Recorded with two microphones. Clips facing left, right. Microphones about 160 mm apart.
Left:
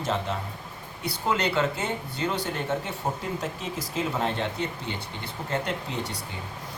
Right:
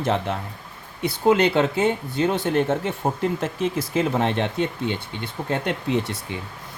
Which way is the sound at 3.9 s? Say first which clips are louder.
Right 4 dB; 70° right (ahead or behind).